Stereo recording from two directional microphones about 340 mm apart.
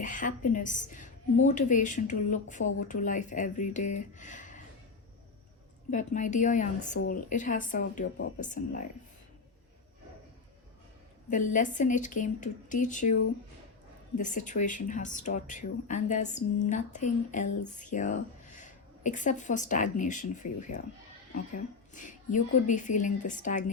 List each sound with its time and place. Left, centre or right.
0.0 s a woman's voice: left
5.9 s a woman's voice: left
11.3 s a woman's voice: left
14.2 s a woman's voice: left
21.9 s a woman's voice: left